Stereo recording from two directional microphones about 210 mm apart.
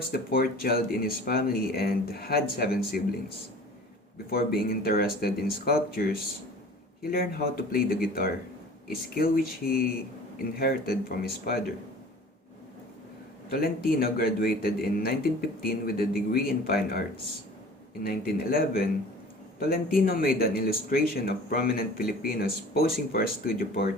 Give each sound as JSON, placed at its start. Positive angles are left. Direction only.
{"t": 0.1, "sound": "speech", "side_deg": 45}
{"t": 13.5, "sound": "speech", "side_deg": 45}
{"t": 18.0, "sound": "speech", "side_deg": 45}